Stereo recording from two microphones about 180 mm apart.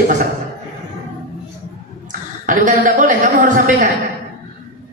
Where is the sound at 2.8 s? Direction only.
50° right (ahead or behind).